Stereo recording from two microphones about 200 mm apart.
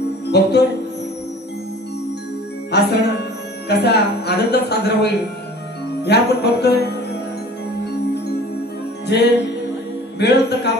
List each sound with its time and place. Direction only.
0.3 s speech: 55° left (ahead or behind)
2.7 s music: 55° left (ahead or behind)
3.6 s speech: 55° left (ahead or behind)
6.0 s music: 55° left (ahead or behind)
9.0 s music: 55° left (ahead or behind)